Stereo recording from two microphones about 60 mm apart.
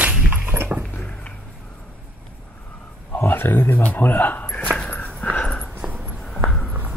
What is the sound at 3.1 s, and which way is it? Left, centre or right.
Speech, left.